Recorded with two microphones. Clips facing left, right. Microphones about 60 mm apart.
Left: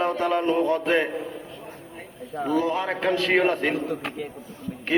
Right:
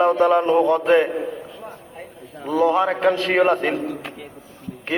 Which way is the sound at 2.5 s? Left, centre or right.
Right.